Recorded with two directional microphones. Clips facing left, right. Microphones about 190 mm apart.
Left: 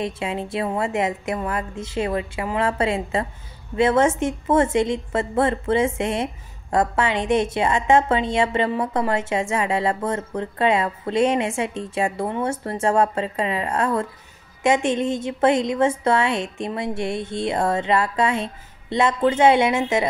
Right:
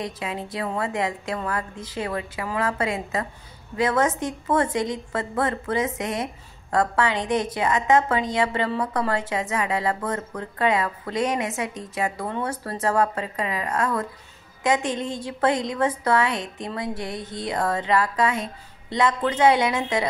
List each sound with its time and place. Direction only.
0.0 s a woman's voice: 25° left (ahead or behind)